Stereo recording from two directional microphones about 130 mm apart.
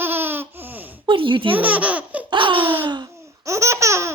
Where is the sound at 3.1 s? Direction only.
25° right (ahead or behind).